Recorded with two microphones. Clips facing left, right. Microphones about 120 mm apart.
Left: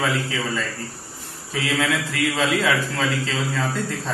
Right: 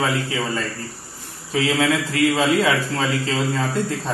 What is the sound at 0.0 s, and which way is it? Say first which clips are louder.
Speech: right 2 dB; 35° right (ahead or behind).